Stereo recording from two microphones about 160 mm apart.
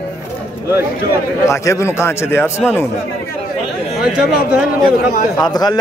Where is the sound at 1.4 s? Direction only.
20° left (ahead or behind).